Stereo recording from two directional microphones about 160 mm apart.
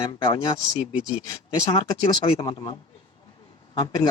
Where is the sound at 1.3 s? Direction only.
25° left (ahead or behind).